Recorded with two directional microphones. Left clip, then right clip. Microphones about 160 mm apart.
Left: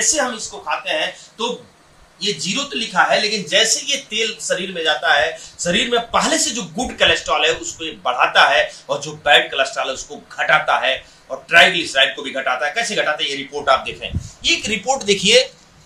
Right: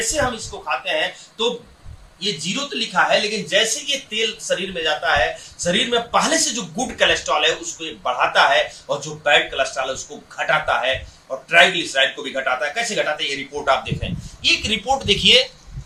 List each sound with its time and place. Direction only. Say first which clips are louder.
0.6 s speech: left 1 dB; 5° right (ahead or behind)
14.4 s speech: even; 20° left (ahead or behind)